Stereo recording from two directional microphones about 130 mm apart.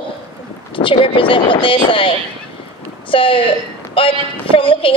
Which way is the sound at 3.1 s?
40° left (ahead or behind).